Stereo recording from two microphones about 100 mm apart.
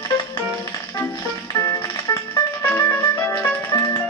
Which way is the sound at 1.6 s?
40° left (ahead or behind).